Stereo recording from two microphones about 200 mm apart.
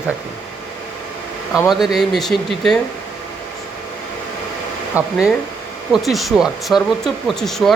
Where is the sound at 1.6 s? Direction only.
Centre (ahead or behind).